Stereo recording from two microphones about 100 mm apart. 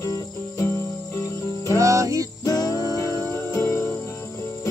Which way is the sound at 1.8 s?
30° right (ahead or behind).